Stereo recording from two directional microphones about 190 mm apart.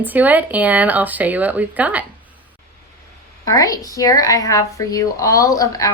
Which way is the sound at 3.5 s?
20° left (ahead or behind).